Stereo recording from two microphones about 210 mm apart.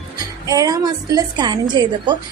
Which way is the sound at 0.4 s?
15° right (ahead or behind).